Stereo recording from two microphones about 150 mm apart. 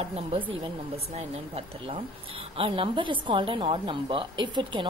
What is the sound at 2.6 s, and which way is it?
A woman's voice, 35° right (ahead or behind).